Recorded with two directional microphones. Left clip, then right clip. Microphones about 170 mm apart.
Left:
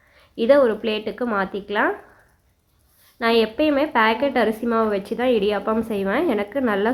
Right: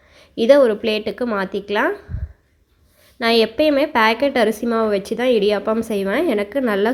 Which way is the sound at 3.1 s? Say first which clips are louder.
Right 3 dB; 30° right (ahead or behind).